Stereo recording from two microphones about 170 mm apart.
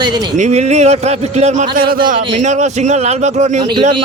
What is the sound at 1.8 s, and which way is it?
Speech, 60° right (ahead or behind).